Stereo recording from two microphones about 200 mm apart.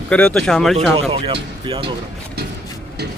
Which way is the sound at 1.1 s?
30° right (ahead or behind).